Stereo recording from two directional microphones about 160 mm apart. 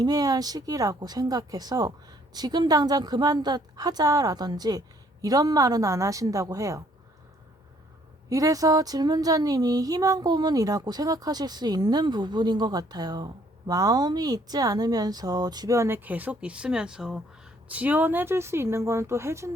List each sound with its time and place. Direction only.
0.0 s speech: 25° right (ahead or behind)
8.3 s speech: 20° right (ahead or behind)